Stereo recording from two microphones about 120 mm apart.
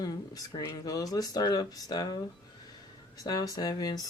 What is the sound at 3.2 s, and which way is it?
Speech, 30° left (ahead or behind).